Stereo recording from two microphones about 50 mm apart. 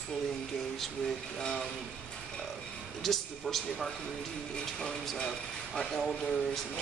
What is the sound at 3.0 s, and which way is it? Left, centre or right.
Speech, centre.